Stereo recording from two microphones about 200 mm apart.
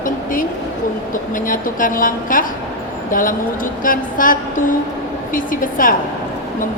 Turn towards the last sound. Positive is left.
turn(degrees=45)  # may be behind; listen again after turning